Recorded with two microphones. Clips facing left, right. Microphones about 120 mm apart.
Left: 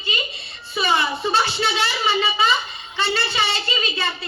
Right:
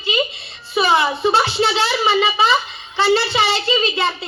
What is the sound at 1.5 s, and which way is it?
Speech, 25° right (ahead or behind).